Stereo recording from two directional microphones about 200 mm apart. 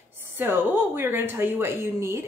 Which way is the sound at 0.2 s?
10° right (ahead or behind).